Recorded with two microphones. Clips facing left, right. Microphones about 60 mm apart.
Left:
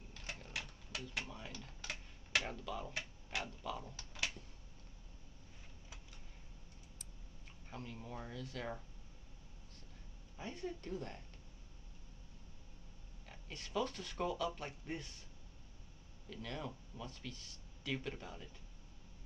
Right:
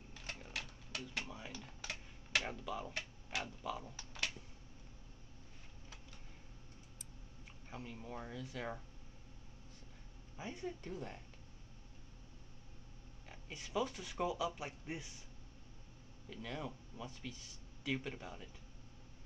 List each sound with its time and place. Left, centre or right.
0.5 s typewriter: centre
1.3 s computer keyboard: centre
2.5 s speech: centre
7.7 s speech: centre
10.3 s speech: centre
13.3 s speech: centre
16.3 s speech: centre